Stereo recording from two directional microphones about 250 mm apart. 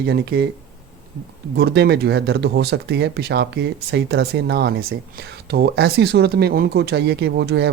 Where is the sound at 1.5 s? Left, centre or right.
Right.